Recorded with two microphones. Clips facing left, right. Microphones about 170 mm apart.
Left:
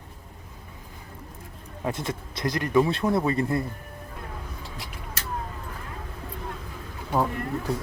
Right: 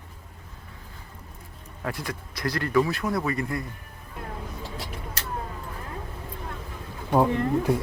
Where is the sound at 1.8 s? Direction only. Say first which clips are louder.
Left 3 dB; 20° left (ahead or behind).